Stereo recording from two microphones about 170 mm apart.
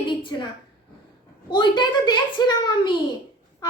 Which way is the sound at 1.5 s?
25° left (ahead or behind).